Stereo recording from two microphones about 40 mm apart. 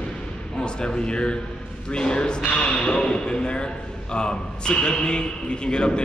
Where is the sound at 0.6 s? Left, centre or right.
Left.